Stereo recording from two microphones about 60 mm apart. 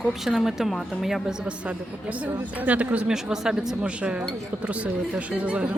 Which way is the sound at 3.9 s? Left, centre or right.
Centre.